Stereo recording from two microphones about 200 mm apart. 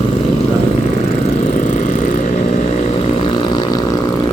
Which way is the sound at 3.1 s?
25° left (ahead or behind).